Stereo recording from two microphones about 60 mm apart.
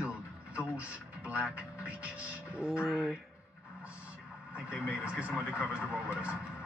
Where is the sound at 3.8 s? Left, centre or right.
Right.